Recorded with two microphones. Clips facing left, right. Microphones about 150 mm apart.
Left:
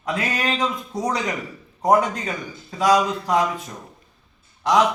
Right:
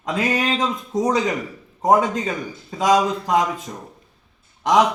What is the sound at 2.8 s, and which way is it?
Speech, 20° right (ahead or behind).